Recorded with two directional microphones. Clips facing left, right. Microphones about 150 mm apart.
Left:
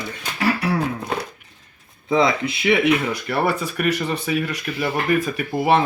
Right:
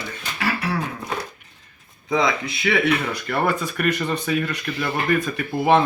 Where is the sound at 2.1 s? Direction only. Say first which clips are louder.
Left 3 dB; 30° left (ahead or behind).